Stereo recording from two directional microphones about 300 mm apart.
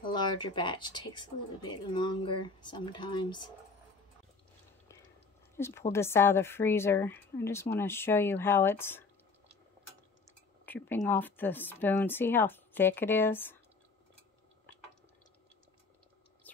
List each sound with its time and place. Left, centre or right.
0.0 s speech: centre
5.6 s speech: centre
10.6 s speech: centre